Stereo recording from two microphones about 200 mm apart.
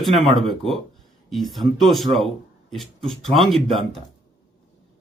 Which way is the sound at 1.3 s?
Centre (ahead or behind).